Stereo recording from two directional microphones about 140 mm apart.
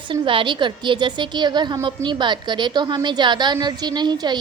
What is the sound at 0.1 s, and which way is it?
A woman's voice, 35° right (ahead or behind).